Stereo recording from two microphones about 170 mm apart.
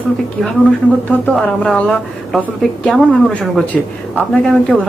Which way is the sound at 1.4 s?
Centre (ahead or behind).